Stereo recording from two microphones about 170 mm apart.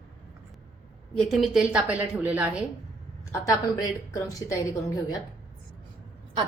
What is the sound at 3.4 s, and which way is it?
A woman's voice, 20° left (ahead or behind).